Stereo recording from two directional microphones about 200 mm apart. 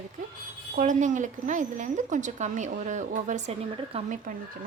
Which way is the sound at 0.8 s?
40° right (ahead or behind).